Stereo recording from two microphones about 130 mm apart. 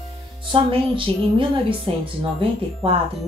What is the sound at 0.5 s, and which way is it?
Speech, 40° right (ahead or behind).